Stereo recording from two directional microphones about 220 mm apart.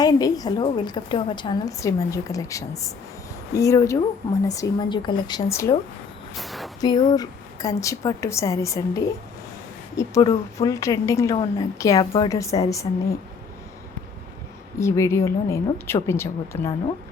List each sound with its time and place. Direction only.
0.0 s a woman's voice: 15° left (ahead or behind)
6.3 s a sound: centre (ahead or behind)
6.8 s a woman's voice: 20° left (ahead or behind)
10.0 s a woman's voice: 15° left (ahead or behind)
14.8 s a woman's voice: 10° left (ahead or behind)